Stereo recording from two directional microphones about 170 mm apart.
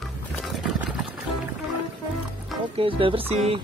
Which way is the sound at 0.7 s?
Centre (ahead or behind).